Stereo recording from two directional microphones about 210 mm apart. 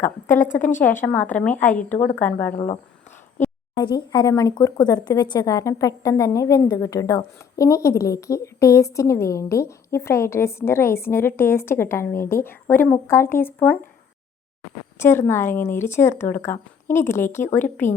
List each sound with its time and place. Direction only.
0.3 s a woman's voice: 40° left (ahead or behind)
0.6 s speech: 10° left (ahead or behind)
3.8 s speech: 20° left (ahead or behind)
14.9 s speech: 10° left (ahead or behind)